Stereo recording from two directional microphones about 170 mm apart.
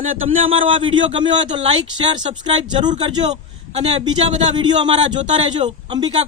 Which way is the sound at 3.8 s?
40° right (ahead or behind).